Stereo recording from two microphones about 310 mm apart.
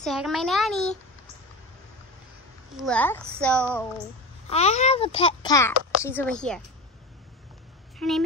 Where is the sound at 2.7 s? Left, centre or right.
Centre.